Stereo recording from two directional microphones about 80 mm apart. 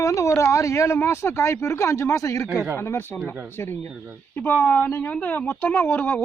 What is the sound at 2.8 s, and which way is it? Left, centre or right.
Speech, left.